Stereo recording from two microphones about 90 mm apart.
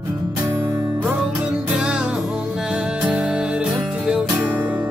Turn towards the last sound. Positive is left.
turn(degrees=-20)  # may be behind; listen again after turning